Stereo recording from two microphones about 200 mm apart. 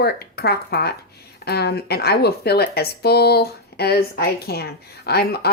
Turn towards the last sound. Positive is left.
turn(degrees=50)  # may be behind; listen again after turning